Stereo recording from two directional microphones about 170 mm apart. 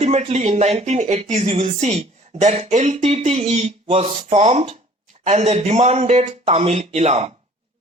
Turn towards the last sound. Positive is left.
turn(degrees=-40)  # may be behind; listen again after turning